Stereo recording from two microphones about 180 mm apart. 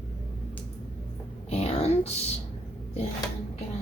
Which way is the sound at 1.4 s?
35° left (ahead or behind).